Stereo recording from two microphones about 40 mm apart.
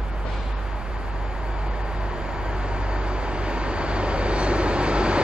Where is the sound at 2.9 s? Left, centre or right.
Right.